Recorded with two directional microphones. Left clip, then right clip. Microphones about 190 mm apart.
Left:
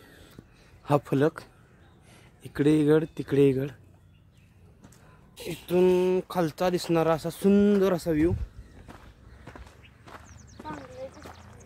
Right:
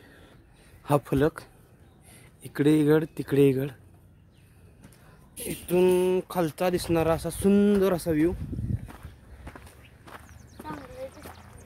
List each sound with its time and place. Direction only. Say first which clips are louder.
0.8 s speech: even; centre (ahead or behind)
5.3 s speech: even; centre (ahead or behind)
8.9 s walk: right 1 dB; 10° right (ahead or behind)
10.8 s a sound: right 1 dB; 15° right (ahead or behind)